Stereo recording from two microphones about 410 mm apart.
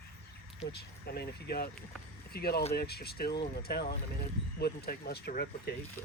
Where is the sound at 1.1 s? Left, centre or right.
Left.